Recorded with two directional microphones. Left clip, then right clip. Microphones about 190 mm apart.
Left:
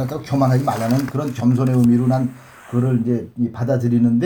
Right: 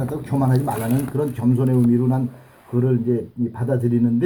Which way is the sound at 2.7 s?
45° left (ahead or behind).